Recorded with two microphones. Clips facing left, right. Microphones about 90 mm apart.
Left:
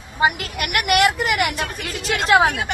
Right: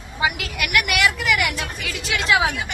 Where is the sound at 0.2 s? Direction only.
45° left (ahead or behind).